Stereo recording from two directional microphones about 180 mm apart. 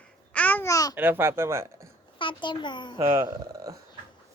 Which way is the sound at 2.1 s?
25° left (ahead or behind).